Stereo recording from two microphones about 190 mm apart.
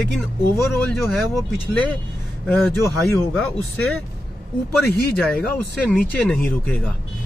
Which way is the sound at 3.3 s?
Centre (ahead or behind).